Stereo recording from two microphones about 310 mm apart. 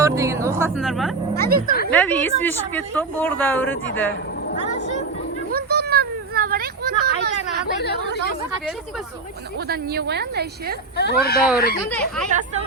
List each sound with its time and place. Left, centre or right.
0.0 s speech: centre
1.4 s speech: right
1.9 s speech: centre
5.5 s a sound: right
7.8 s speech: left
9.6 s speech: right
10.9 s speech: left
11.8 s speech: centre